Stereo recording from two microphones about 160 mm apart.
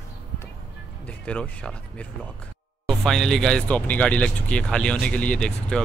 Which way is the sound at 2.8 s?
Centre (ahead or behind).